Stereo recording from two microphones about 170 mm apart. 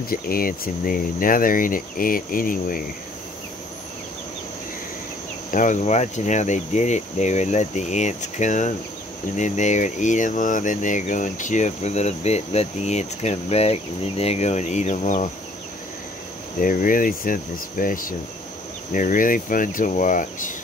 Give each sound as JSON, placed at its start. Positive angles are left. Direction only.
{"t": 0.1, "sound": "speech", "side_deg": 60}
{"t": 5.5, "sound": "speech", "side_deg": 50}
{"t": 16.5, "sound": "speech", "side_deg": 55}